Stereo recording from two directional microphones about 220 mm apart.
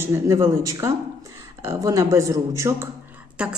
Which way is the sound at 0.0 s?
15° right (ahead or behind).